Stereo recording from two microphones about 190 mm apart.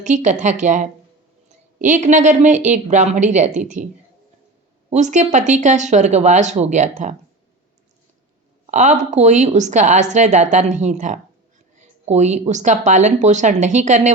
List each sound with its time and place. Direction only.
0.0 s a woman's voice: 40° right (ahead or behind)
4.9 s a woman's voice: 40° right (ahead or behind)
8.6 s a woman's voice: 40° right (ahead or behind)